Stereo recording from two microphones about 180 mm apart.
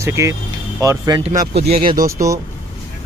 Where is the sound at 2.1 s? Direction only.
20° right (ahead or behind).